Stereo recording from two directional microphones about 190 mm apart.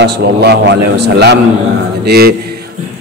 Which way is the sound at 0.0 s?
60° right (ahead or behind).